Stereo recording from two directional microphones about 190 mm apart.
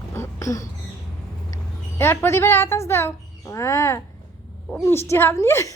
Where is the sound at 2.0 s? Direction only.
10° left (ahead or behind).